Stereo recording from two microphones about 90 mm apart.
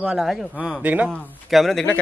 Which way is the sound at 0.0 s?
5° right (ahead or behind).